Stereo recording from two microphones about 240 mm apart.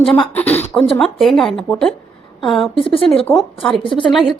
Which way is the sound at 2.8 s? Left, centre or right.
Left.